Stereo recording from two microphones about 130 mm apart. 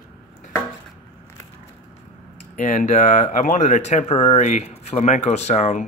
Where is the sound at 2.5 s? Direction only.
75° left (ahead or behind).